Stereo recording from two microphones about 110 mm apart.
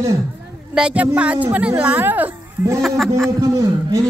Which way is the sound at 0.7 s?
10° right (ahead or behind).